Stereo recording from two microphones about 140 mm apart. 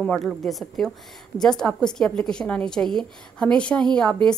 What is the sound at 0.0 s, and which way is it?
A woman's voice, centre (ahead or behind).